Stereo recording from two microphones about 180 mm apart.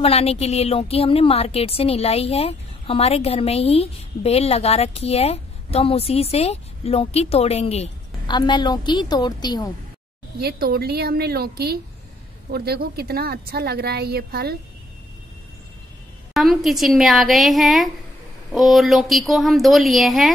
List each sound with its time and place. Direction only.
0.0 s a woman's voice: 35° left (ahead or behind)
10.4 s a woman's voice: 60° right (ahead or behind)
16.3 s speech: centre (ahead or behind)